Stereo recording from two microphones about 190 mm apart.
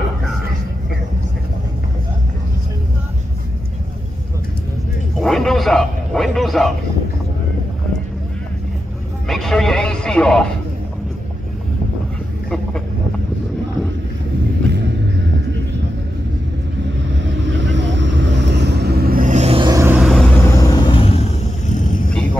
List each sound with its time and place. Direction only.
5.2 s bow-wow: centre (ahead or behind)
9.3 s a sound: centre (ahead or behind)
17.1 s vehicle: 70° right (ahead or behind); by 19.7 s 30° right (ahead or behind)
19.7 s vehicle: 15° right (ahead or behind)
20.0 s vehicle: centre (ahead or behind); by 21.3 s 30° left (ahead or behind)
21.7 s vehicle: 40° left (ahead or behind)